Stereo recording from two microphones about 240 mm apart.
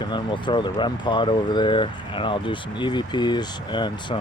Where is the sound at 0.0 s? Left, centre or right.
Centre.